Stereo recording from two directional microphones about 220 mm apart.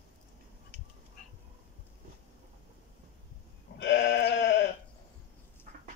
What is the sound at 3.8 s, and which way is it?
Sheep, 55° left (ahead or behind).